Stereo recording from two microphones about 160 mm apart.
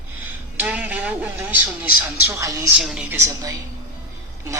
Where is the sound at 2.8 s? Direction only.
5° right (ahead or behind).